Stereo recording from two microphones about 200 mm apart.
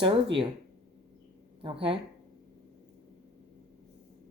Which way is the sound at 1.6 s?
25° right (ahead or behind).